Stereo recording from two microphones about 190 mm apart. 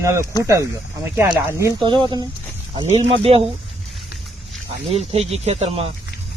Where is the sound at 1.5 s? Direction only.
15° right (ahead or behind).